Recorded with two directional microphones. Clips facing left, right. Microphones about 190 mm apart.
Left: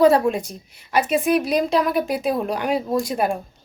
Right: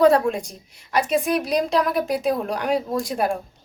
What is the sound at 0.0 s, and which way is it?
A woman's voice, 5° left (ahead or behind).